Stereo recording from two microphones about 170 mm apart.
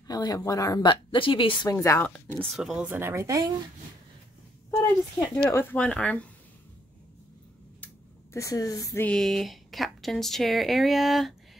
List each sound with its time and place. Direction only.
0.0 s speech: 20° left (ahead or behind)
2.0 s speech: 5° left (ahead or behind); by 3.5 s 20° right (ahead or behind)
4.6 s speech: 15° left (ahead or behind)
7.8 s a sound: 15° left (ahead or behind)
9.0 s speech: 5° left (ahead or behind)